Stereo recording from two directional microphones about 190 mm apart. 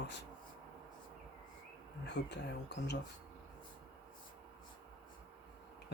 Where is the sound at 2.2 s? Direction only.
65° left (ahead or behind).